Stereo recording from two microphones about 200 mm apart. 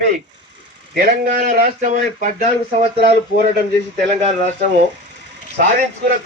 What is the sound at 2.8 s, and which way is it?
Speech, 30° right (ahead or behind).